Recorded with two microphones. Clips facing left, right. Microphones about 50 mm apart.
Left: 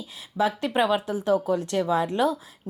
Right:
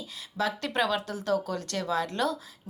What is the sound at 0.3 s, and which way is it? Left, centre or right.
A woman's voice, centre.